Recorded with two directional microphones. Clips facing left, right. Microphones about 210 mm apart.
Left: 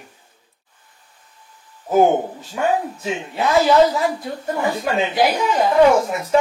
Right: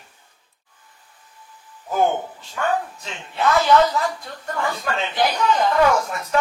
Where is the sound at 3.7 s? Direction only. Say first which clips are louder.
Left 3 dB; 25° left (ahead or behind); by 5.4 s 10° left (ahead or behind).